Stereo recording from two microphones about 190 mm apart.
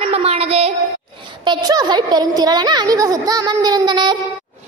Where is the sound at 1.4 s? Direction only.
20° right (ahead or behind).